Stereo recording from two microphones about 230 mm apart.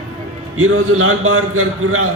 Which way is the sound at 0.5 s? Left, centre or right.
Right.